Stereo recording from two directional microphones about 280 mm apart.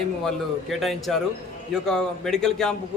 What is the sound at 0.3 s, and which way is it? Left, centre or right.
A man's voice, centre.